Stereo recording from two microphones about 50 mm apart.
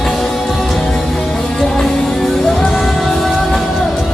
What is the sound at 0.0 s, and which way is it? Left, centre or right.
Music, centre.